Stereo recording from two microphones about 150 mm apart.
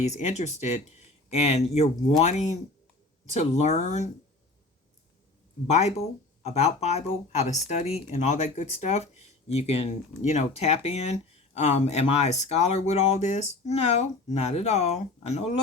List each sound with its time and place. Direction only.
0.2 s speech: 50° left (ahead or behind)
5.6 s speech: 45° left (ahead or behind)